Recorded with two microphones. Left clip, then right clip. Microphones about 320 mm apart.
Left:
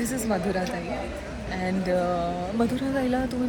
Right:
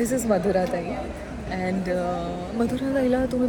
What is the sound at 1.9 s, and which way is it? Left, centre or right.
Speech, centre.